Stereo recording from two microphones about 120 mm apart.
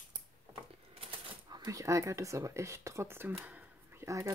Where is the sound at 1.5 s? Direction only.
30° right (ahead or behind).